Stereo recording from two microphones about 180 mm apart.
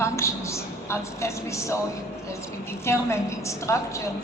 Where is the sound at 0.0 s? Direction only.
15° left (ahead or behind).